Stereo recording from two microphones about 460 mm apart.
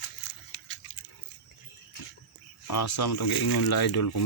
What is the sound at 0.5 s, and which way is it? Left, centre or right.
Pig, left.